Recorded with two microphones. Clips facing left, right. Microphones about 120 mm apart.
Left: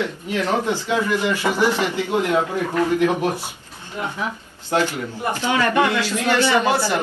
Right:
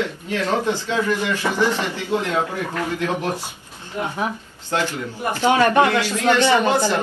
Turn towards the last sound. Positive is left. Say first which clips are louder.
# right 1 dB
turn(degrees=-20)  # may be behind; listen again after turning